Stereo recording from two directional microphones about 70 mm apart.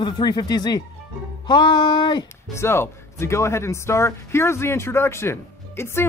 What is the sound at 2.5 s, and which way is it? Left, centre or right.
Speech, left.